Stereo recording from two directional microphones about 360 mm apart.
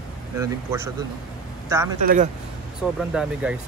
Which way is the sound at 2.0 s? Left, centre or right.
Right.